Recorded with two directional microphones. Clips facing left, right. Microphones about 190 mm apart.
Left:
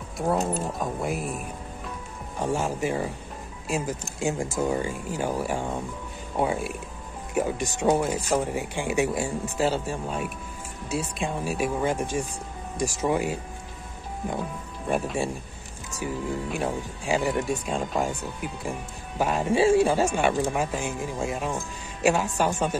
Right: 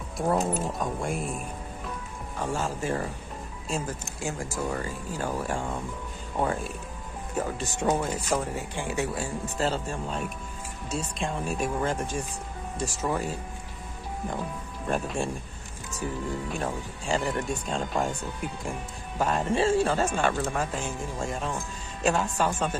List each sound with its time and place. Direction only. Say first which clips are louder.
0.3 s speech: left 1 dB; centre (ahead or behind)
2.3 s speech: left 3 dB; 15° left (ahead or behind)
4.2 s speech: left 6 dB; 20° left (ahead or behind)
14.9 s speech: left 2 dB; 5° left (ahead or behind)